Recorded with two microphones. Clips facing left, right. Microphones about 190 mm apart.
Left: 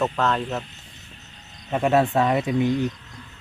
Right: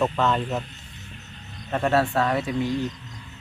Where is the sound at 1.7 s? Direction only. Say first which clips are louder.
Left 2 dB; 15° left (ahead or behind).